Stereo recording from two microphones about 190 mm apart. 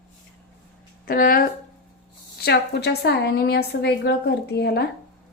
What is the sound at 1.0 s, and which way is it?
Speech, 50° left (ahead or behind).